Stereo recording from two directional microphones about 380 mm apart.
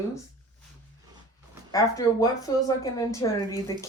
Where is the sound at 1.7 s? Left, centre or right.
Centre.